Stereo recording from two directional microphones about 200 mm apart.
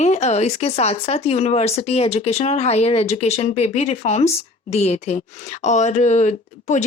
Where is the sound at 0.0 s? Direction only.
35° left (ahead or behind).